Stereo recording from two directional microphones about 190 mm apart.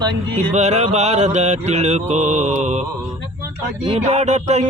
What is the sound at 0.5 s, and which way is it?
Mantra, 35° right (ahead or behind).